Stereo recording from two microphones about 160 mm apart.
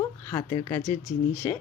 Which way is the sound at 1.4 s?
15° left (ahead or behind).